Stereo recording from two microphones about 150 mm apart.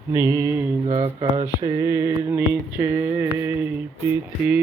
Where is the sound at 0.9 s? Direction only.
55° right (ahead or behind).